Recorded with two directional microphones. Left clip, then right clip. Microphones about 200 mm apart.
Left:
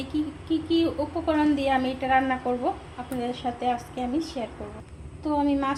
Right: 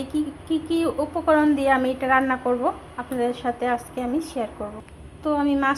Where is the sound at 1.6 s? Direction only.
15° right (ahead or behind).